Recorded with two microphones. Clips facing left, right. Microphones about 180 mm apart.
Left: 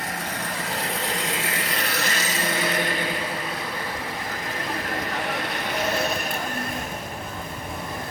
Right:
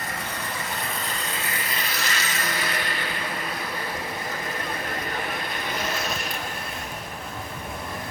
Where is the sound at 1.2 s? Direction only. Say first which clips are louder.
Left 3 dB; 90° left; by 2.2 s 55° left (ahead or behind).